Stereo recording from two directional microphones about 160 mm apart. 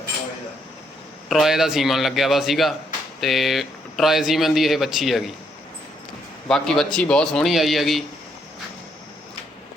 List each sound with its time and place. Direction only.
1.3 s speech: centre (ahead or behind)
6.5 s speech: 5° left (ahead or behind)